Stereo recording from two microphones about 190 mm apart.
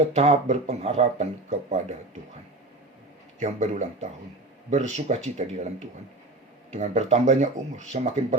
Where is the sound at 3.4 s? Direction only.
40° right (ahead or behind).